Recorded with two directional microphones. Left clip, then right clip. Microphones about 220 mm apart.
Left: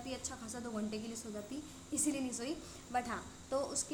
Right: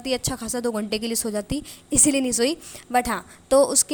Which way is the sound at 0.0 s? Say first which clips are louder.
Right 18 dB; 40° right (ahead or behind).